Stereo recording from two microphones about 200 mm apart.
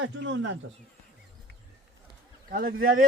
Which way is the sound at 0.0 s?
65° right (ahead or behind).